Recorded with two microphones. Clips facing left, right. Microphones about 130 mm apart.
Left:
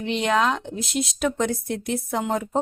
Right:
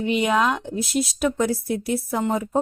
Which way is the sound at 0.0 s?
5° right (ahead or behind).